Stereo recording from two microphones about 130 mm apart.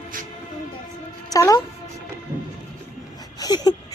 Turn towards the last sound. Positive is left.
turn(degrees=30)  # may be behind; listen again after turning